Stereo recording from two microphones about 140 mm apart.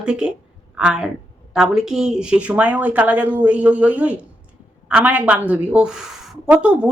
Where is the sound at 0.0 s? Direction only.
5° right (ahead or behind).